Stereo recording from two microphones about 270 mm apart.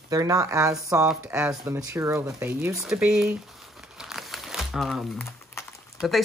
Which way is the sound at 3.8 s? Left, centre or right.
Centre.